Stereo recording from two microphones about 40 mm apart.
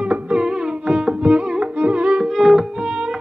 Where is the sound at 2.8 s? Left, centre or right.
Centre.